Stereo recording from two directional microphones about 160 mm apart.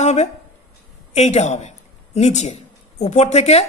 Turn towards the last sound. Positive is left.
turn(degrees=40)  # may be behind; listen again after turning